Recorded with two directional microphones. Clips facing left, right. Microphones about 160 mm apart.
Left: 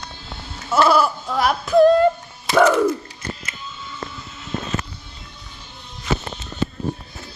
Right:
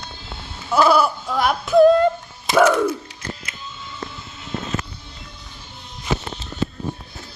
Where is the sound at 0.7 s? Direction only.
Centre (ahead or behind).